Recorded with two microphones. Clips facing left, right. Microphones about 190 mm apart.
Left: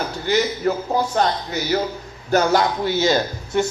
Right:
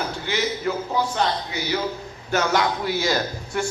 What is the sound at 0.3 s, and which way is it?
Speech, 40° left (ahead or behind).